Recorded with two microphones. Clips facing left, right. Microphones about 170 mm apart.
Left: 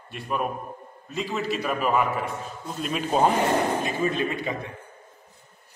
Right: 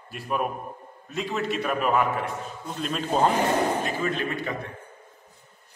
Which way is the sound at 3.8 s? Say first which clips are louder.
Left 2 dB; 20° left (ahead or behind).